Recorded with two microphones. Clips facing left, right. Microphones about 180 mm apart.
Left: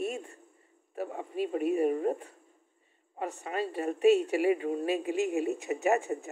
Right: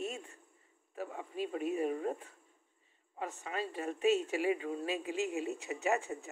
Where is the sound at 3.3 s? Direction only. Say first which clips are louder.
Left 7 dB; 45° left (ahead or behind).